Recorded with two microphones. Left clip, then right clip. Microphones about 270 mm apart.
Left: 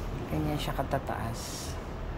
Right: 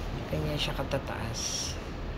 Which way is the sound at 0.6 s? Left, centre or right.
Left.